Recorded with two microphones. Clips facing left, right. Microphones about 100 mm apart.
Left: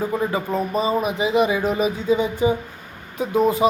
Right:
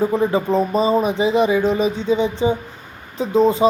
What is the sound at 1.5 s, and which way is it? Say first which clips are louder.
Speech: right 3 dB; 10° left (ahead or behind).